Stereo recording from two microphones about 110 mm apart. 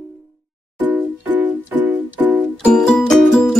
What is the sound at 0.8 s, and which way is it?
Music, 15° right (ahead or behind).